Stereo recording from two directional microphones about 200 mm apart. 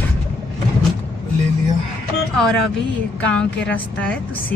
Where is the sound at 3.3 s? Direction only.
5° left (ahead or behind).